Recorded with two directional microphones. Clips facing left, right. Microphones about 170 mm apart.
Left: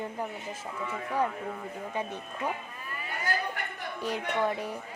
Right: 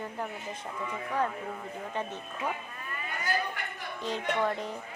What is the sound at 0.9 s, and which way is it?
A woman's voice, 10° left (ahead or behind).